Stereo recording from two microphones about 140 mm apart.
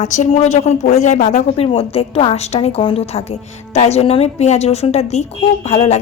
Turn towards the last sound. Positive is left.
turn(degrees=50)  # may be behind; listen again after turning